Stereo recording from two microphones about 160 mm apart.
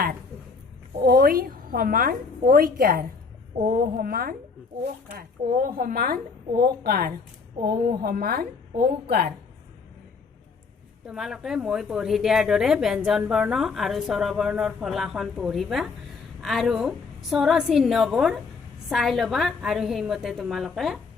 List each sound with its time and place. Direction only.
1.0 s a woman's voice: 70° right (ahead or behind)
11.0 s a woman's voice: 5° right (ahead or behind)